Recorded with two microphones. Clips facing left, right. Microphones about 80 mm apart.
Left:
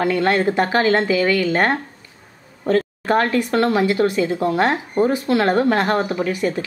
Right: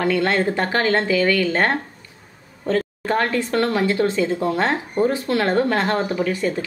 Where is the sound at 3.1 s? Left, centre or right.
Centre.